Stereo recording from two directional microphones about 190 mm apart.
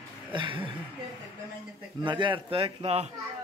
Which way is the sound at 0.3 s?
25° right (ahead or behind).